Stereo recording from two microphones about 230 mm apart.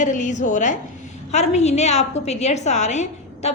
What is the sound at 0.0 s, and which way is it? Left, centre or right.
A woman's voice, left.